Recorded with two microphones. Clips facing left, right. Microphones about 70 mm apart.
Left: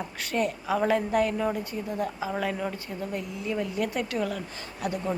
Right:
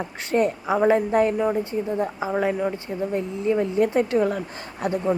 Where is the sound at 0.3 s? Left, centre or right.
Right.